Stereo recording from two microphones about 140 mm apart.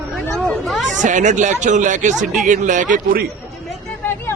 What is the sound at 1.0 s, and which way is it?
A man's voice, 60° right (ahead or behind).